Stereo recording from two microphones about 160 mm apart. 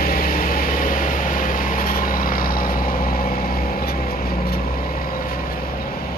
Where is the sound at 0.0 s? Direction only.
65° left (ahead or behind).